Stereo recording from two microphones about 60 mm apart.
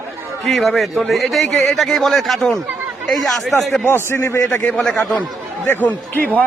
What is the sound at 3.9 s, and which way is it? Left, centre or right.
Speech, left.